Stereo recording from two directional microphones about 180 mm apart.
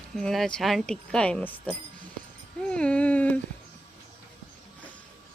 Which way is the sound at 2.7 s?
5° left (ahead or behind).